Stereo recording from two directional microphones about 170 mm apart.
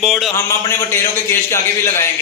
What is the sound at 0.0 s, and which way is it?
Speech, centre (ahead or behind).